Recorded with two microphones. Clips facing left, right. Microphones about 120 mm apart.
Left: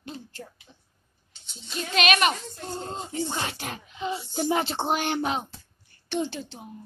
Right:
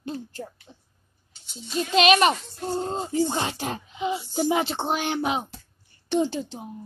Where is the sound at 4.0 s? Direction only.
10° right (ahead or behind).